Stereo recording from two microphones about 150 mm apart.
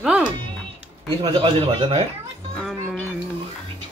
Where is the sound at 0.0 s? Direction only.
5° right (ahead or behind).